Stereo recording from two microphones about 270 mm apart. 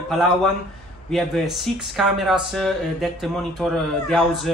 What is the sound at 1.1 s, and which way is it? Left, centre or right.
Speech, centre.